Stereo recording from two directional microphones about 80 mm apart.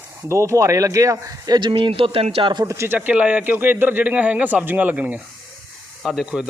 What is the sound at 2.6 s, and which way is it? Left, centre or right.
Speech, right.